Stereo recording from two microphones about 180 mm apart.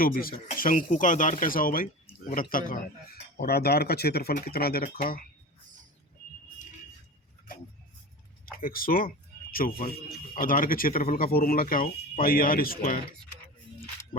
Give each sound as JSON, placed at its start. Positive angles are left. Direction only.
{"t": 0.0, "sound": "speech", "side_deg": 55}
{"t": 8.6, "sound": "speech", "side_deg": 55}
{"t": 14.1, "sound": "speech", "side_deg": 30}